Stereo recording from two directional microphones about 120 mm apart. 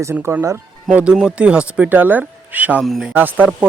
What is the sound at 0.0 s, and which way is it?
Speech, 20° right (ahead or behind).